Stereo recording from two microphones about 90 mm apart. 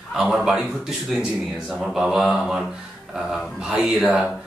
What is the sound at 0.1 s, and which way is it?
Speech, centre (ahead or behind).